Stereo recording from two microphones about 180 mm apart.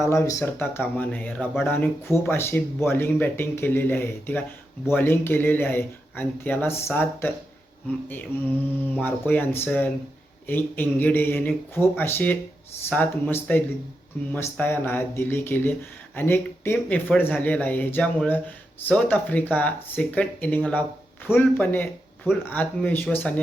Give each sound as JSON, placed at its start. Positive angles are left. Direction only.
{"t": 0.0, "sound": "speech", "side_deg": 15}
{"t": 13.5, "sound": "speech", "side_deg": 10}